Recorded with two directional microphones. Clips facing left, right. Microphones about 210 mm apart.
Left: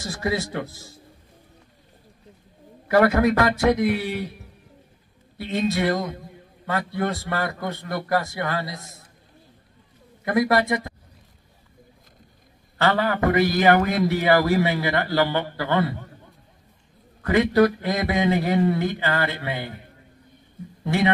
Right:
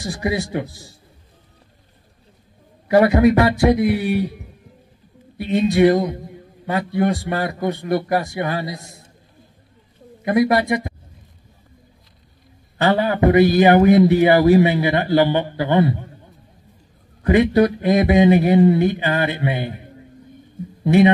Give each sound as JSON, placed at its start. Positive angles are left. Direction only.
{"t": 0.0, "sound": "a man's voice", "side_deg": -15}
{"t": 2.9, "sound": "a man's voice", "side_deg": -20}
{"t": 10.2, "sound": "a man's voice", "side_deg": -20}
{"t": 12.7, "sound": "a man's voice", "side_deg": -15}
{"t": 17.2, "sound": "a man's voice", "side_deg": -20}